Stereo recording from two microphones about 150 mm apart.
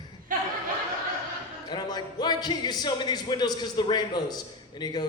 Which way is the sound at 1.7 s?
30° left (ahead or behind).